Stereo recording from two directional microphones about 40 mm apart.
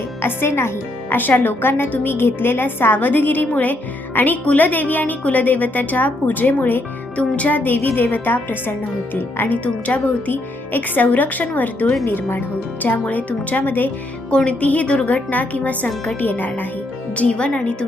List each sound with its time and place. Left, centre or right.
0.2 s speech: left
1.1 s a woman's voice: left
7.2 s a woman's voice: left
9.6 s a woman's voice: left
12.0 s a woman's voice: left
12.8 s a woman's voice: left
14.3 s a woman's voice: left
16.2 s a woman's voice: left
17.2 s speech: left